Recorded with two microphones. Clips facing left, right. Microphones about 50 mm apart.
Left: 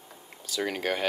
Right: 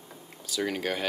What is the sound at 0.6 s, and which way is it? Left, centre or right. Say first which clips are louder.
Speech: left 1 dB; centre.